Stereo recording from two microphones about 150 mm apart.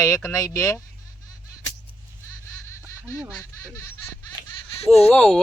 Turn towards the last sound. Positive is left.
turn(degrees=5)  # may be behind; listen again after turning